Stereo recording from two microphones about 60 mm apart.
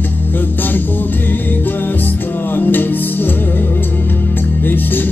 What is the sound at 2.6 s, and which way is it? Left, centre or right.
Music, left.